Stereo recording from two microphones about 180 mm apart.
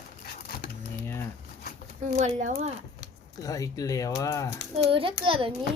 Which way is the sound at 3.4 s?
20° left (ahead or behind).